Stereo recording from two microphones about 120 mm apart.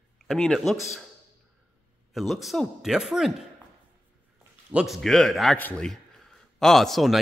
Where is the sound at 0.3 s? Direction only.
Centre (ahead or behind).